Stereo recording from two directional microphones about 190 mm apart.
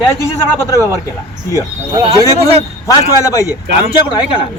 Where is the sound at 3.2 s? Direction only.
15° left (ahead or behind).